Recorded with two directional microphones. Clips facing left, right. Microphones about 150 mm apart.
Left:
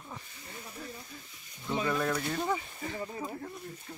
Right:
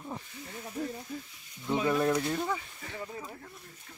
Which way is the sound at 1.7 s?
10° right (ahead or behind).